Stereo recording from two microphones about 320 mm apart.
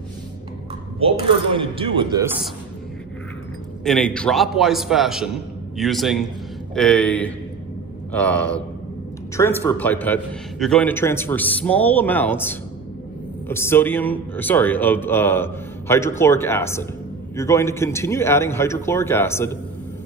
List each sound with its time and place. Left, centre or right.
0.9 s speech: centre
3.8 s a man's voice: centre